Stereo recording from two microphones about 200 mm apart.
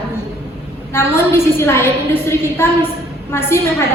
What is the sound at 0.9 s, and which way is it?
A woman's voice, 10° left (ahead or behind).